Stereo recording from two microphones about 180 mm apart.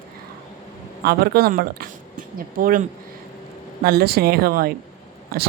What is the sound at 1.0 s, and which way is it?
Speech, 60° right (ahead or behind).